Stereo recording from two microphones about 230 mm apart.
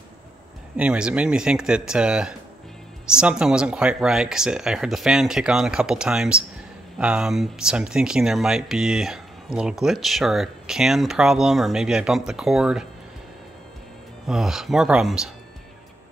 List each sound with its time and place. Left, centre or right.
0.7 s speech: centre
14.2 s speech: centre